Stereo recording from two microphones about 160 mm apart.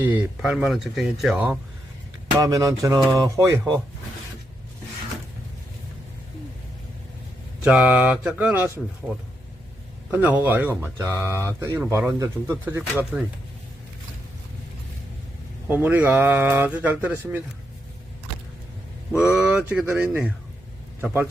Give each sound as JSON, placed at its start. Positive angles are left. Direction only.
{"t": 0.0, "sound": "speech", "side_deg": -10}
{"t": 2.4, "sound": "speech", "side_deg": -20}
{"t": 7.6, "sound": "speech", "side_deg": -5}
{"t": 10.1, "sound": "speech", "side_deg": -10}
{"t": 15.6, "sound": "speech", "side_deg": -10}
{"t": 19.1, "sound": "speech", "side_deg": -5}